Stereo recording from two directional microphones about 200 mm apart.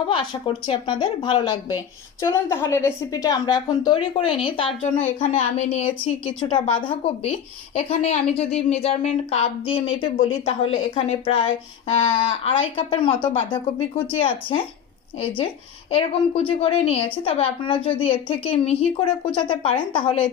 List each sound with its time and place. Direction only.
0.1 s a woman's voice: 25° left (ahead or behind)
5.0 s a woman's voice: 35° left (ahead or behind)
15.9 s a woman's voice: 30° left (ahead or behind)